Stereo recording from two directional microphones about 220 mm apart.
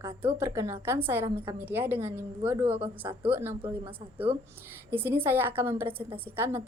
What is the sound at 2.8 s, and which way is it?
Speech, 25° right (ahead or behind).